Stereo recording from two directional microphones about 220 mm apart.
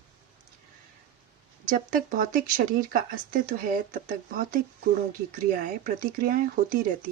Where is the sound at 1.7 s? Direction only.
40° right (ahead or behind).